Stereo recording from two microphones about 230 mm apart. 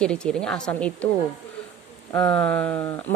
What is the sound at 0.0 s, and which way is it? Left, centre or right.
Speech, centre.